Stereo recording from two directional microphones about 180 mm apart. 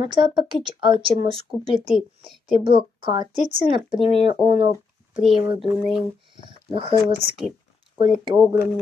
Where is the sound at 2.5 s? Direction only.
30° right (ahead or behind).